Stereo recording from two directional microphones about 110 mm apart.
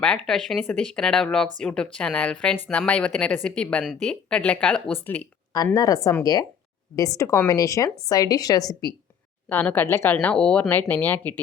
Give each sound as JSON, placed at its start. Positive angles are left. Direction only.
{"t": 0.0, "sound": "speech", "side_deg": 5}
{"t": 5.7, "sound": "speech", "side_deg": 30}
{"t": 9.5, "sound": "speech", "side_deg": 15}
{"t": 10.2, "sound": "speech", "side_deg": 10}